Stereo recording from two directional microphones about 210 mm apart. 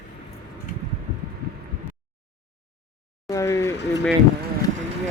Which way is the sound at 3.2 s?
15° left (ahead or behind).